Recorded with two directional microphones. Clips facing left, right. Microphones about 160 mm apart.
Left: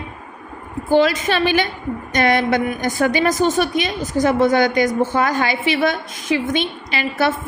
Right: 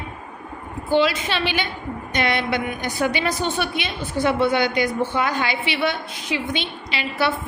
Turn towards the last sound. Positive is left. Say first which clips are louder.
# left 4 dB
turn(degrees=45)  # may be behind; listen again after turning